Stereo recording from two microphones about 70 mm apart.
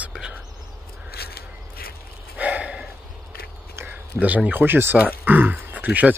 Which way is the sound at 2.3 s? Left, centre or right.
Centre.